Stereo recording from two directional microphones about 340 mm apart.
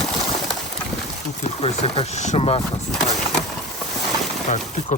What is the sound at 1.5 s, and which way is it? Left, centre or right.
Speech, centre.